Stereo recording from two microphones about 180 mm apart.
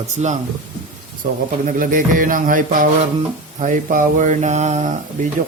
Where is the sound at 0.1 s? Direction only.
40° right (ahead or behind).